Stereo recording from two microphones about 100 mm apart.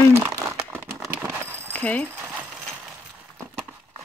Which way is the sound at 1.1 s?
25° right (ahead or behind).